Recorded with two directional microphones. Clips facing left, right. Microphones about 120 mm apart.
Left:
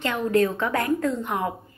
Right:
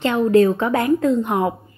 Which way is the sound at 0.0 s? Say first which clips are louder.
Right 7 dB; 25° right (ahead or behind).